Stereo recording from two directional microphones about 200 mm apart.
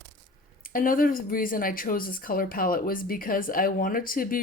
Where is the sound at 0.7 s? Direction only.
45° left (ahead or behind).